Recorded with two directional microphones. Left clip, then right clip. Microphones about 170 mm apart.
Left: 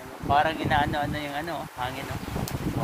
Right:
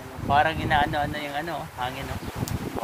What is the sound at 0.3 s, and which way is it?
Speech, 15° left (ahead or behind).